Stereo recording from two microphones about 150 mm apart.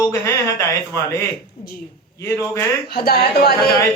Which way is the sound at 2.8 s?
90° left.